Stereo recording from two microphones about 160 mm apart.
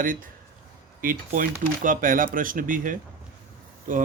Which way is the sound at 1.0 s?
60° right (ahead or behind).